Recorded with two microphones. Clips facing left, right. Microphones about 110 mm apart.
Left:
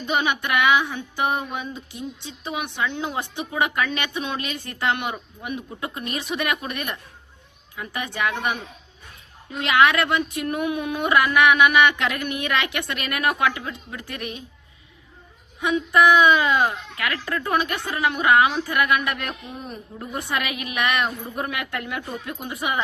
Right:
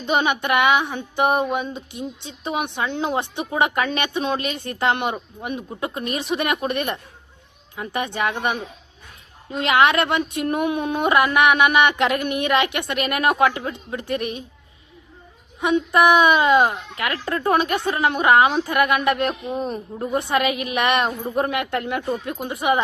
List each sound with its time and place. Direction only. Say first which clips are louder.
0.0 s a woman's voice: right 3 dB; 25° right (ahead or behind)
16.0 s a woman's voice: even; 20° right (ahead or behind)